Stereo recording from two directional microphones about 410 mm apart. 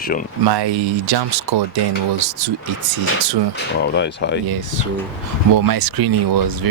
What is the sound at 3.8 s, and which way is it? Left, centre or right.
Speech, left.